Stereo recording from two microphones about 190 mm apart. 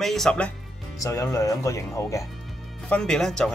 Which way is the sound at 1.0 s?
15° left (ahead or behind).